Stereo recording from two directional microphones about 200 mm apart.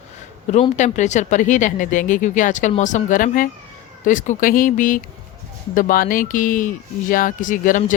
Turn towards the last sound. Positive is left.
turn(degrees=40)  # may be behind; listen again after turning